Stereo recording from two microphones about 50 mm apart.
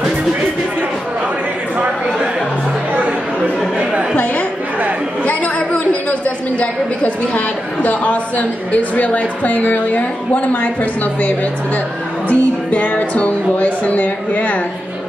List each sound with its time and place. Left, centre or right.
6.2 s a woman's voice: left